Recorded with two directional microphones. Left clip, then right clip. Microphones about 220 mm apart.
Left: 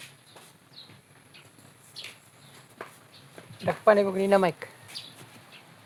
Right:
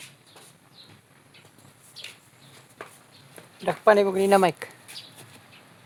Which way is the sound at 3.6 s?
55° right (ahead or behind).